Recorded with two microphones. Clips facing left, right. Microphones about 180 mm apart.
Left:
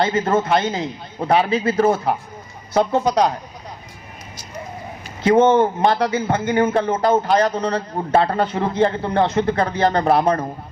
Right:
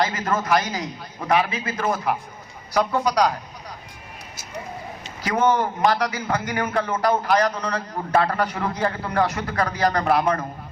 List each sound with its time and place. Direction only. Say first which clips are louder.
0.0 s a man's voice: left 5 dB; 30° left (ahead or behind)
5.2 s a man's voice: left 7 dB; 25° left (ahead or behind)